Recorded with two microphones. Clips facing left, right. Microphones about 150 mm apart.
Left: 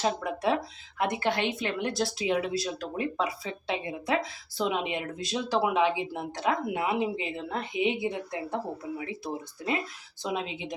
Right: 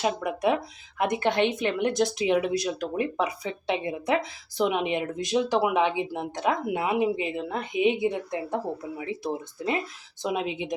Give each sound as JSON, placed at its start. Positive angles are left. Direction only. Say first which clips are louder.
{"t": 0.0, "sound": "speech", "louder": "right 3 dB", "side_deg": -15}